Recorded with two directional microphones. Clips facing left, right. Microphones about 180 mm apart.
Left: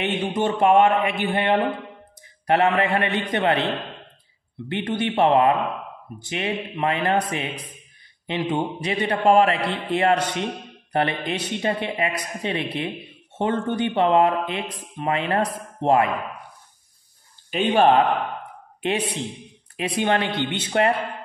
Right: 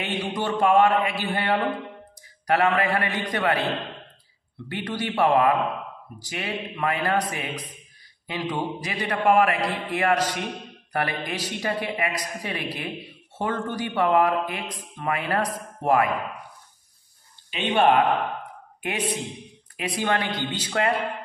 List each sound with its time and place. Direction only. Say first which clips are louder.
0.0 s speech: left 5 dB; 25° left (ahead or behind)
4.6 s speech: left 4 dB; 25° left (ahead or behind)
17.5 s speech: left 3 dB; 45° left (ahead or behind); by 20.9 s 25° left (ahead or behind)